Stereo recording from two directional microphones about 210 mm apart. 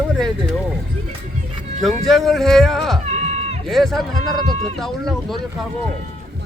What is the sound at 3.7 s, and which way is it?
Speech, centre (ahead or behind).